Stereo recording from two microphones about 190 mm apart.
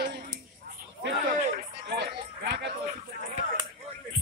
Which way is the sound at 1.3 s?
45° right (ahead or behind).